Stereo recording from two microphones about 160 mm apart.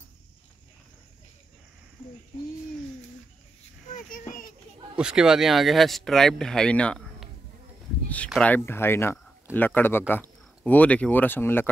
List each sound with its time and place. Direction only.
3.9 s a sound: 55° left (ahead or behind)
4.9 s speech: 5° right (ahead or behind)
8.4 s speech: 10° left (ahead or behind)